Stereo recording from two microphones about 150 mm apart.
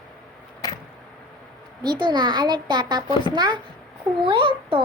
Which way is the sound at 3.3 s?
30° right (ahead or behind).